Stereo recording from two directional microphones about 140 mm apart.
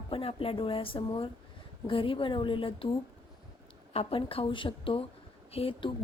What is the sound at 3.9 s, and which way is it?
A woman's voice, 45° left (ahead or behind).